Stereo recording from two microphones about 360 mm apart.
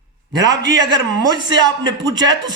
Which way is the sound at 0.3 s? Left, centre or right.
Right.